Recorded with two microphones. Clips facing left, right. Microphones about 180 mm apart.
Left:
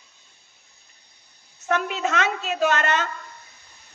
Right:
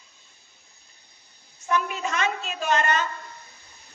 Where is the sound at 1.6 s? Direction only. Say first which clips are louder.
Left 2 dB; 80° left.